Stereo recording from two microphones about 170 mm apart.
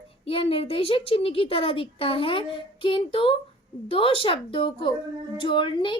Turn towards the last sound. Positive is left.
turn(degrees=30)  # may be behind; listen again after turning